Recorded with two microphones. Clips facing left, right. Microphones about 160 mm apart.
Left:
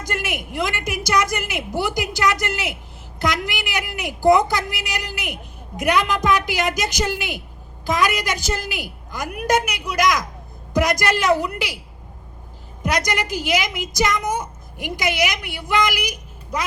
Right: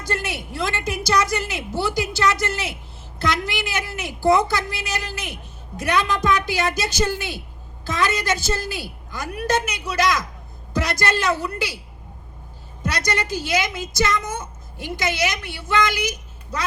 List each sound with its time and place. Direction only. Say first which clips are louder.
0.0 s a woman's voice: even; 15° left (ahead or behind)
12.8 s a woman's voice: left 2 dB; 15° left (ahead or behind)